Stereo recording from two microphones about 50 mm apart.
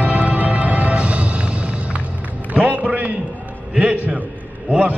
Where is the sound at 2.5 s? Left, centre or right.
Right.